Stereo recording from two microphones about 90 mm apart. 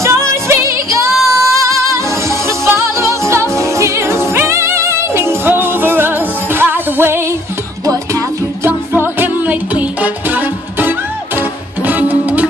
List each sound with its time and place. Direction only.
0.0 s music: 30° right (ahead or behind)
7.8 s music: 45° right (ahead or behind)
8.6 s music: 25° right (ahead or behind)